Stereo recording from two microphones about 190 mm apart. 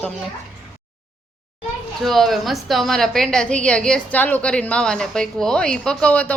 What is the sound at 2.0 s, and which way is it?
A woman's voice, centre (ahead or behind).